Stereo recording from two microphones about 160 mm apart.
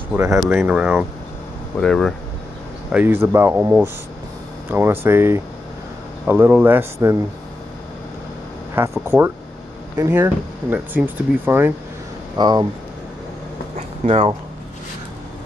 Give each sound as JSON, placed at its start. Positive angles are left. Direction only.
{"t": 0.1, "sound": "speech", "side_deg": -10}
{"t": 2.9, "sound": "speech", "side_deg": -10}
{"t": 8.8, "sound": "speech", "side_deg": -15}
{"t": 9.9, "sound": "speech", "side_deg": -15}
{"t": 12.4, "sound": "speech", "side_deg": -25}
{"t": 13.7, "sound": "a sound", "side_deg": -40}